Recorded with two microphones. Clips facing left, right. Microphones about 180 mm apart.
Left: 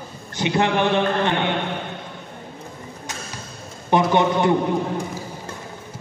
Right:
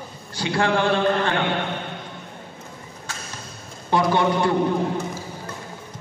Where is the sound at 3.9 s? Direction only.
20° left (ahead or behind).